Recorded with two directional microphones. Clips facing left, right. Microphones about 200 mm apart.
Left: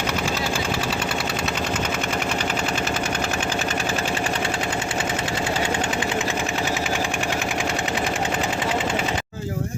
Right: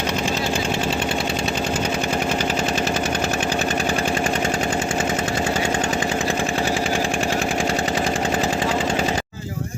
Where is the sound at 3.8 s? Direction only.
40° right (ahead or behind).